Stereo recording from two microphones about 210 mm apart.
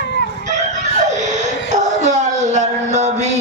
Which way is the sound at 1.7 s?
35° right (ahead or behind).